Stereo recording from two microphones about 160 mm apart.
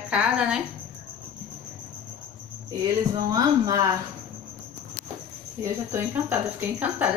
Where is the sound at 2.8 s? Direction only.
20° right (ahead or behind).